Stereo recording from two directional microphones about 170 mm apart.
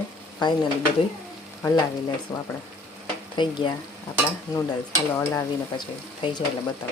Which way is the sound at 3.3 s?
30° left (ahead or behind).